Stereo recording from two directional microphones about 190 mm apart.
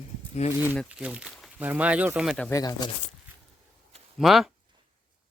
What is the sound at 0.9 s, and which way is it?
Speech, 5° right (ahead or behind).